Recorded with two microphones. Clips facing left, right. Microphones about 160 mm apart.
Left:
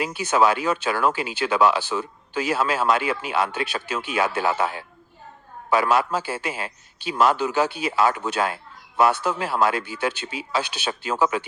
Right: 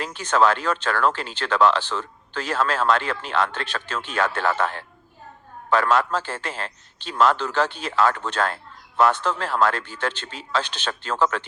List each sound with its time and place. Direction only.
0.0 s speech: 10° left (ahead or behind)